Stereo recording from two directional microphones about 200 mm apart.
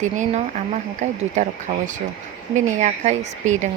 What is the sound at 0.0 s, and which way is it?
Speech, 35° right (ahead or behind).